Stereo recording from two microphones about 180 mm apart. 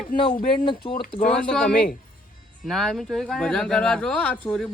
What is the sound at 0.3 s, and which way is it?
Speech, 25° left (ahead or behind).